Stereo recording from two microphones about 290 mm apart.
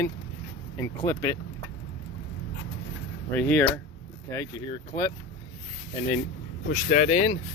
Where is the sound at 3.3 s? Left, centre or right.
Centre.